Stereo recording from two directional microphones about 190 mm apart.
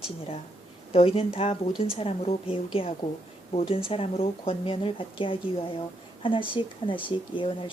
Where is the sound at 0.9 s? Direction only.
30° left (ahead or behind).